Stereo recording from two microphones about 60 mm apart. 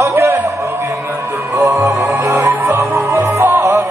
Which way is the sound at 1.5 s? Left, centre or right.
Right.